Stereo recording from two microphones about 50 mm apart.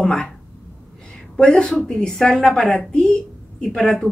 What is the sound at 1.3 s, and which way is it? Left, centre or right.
A woman's voice, centre.